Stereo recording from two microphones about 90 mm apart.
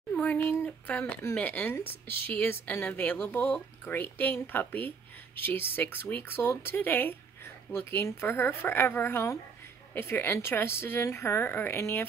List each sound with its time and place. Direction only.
0.1 s speech: 15° left (ahead or behind)